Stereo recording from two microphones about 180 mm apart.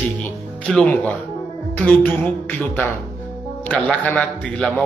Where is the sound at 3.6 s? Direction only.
10° left (ahead or behind).